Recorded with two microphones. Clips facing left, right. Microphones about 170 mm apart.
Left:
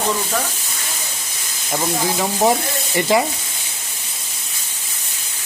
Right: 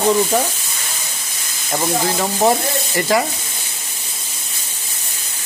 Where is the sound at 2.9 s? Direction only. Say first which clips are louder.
Left 1 dB; 20° left (ahead or behind).